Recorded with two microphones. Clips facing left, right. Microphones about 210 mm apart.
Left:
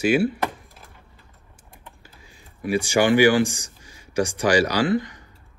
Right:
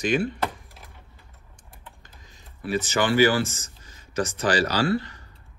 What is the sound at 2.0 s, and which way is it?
Speech, 10° left (ahead or behind).